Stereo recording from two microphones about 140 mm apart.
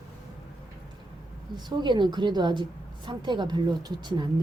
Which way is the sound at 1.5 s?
30° right (ahead or behind).